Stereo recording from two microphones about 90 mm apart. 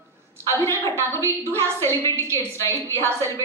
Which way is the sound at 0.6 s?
30° left (ahead or behind).